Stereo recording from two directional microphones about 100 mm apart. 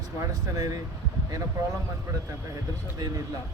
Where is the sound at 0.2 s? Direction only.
35° right (ahead or behind).